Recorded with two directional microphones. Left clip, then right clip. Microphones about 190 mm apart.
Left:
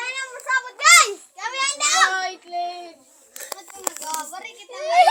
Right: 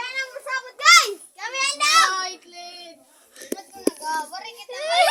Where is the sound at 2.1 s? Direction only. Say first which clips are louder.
Left 4 dB; 65° right (ahead or behind).